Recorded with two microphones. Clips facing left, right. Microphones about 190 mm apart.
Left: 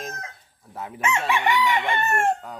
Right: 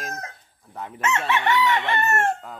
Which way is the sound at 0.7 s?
5° left (ahead or behind).